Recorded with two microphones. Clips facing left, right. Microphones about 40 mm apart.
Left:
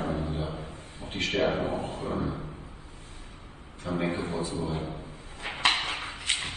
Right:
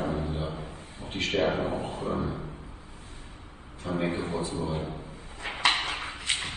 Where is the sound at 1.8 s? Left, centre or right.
Right.